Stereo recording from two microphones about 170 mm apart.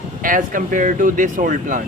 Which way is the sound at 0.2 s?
55° right (ahead or behind).